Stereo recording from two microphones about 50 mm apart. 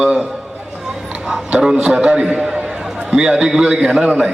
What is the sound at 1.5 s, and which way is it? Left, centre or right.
A man's voice, centre.